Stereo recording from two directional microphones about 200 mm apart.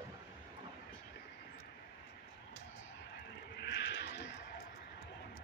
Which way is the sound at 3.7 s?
60° left (ahead or behind).